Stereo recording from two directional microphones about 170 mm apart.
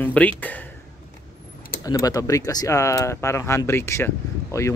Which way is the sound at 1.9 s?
20° left (ahead or behind).